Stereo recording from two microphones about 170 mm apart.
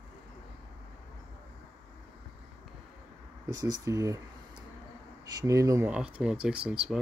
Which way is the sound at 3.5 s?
20° right (ahead or behind).